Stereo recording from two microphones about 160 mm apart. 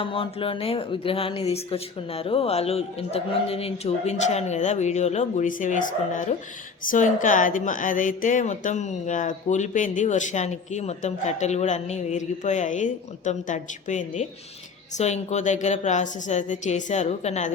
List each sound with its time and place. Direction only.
0.0 s speech: 35° left (ahead or behind)